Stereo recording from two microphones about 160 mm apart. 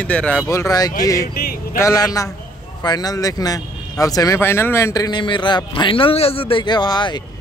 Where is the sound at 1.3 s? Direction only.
65° left (ahead or behind).